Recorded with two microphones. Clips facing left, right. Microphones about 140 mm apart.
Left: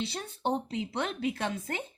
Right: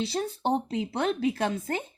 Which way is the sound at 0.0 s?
35° right (ahead or behind).